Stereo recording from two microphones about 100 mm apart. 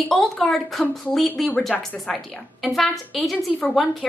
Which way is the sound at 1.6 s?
5° left (ahead or behind).